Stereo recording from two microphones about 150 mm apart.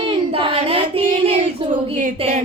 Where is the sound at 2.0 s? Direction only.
60° right (ahead or behind).